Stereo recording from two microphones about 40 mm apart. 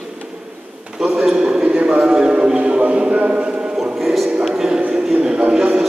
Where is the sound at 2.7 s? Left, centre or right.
Right.